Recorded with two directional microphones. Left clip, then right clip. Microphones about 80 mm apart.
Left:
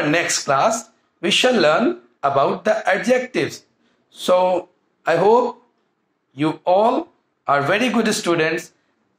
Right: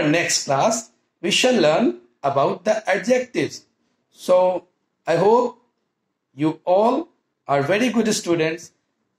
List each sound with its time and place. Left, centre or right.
0.1 s speech: left